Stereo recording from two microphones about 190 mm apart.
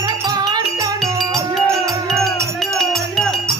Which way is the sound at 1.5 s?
Centre (ahead or behind).